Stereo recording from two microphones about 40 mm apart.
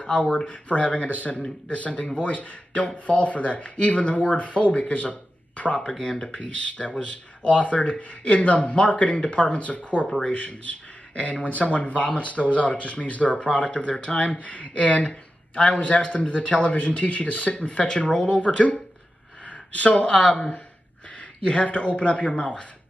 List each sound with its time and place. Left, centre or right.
0.1 s speech: centre
0.5 s speech: left
2.0 s speech: left
2.3 s speech: left
5.9 s speech: left
10.0 s speech: centre
10.3 s speech: left
13.4 s speech: left
18.5 s speech: centre
19.4 s a sound: left
20.1 s speech: centre
21.2 s speech: left